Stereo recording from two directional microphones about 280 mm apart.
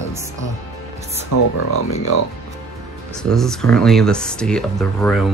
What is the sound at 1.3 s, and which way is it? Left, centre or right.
Speech, left.